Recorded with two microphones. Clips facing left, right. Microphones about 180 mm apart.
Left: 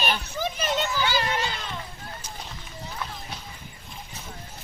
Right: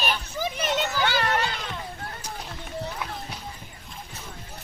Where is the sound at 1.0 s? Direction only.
60° right (ahead or behind).